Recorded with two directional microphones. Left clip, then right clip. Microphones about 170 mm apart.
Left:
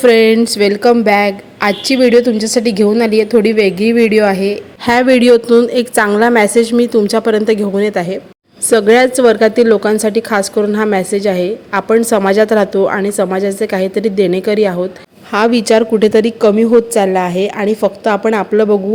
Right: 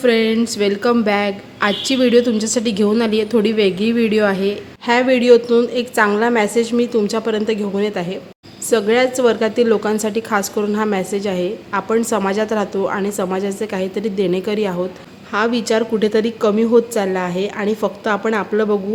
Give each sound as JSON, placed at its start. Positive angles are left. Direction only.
{"t": 0.0, "sound": "speech", "side_deg": 45}
{"t": 0.3, "sound": "a woman's voice", "side_deg": 30}
{"t": 4.9, "sound": "a woman's voice", "side_deg": 35}